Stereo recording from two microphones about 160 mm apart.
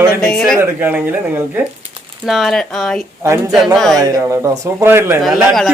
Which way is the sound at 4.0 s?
20° right (ahead or behind).